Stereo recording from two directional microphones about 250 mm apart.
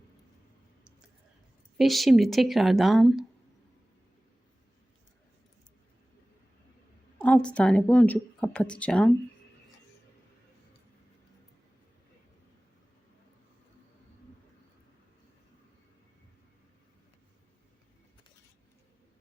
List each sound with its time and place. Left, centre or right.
1.8 s speech: centre
7.2 s speech: centre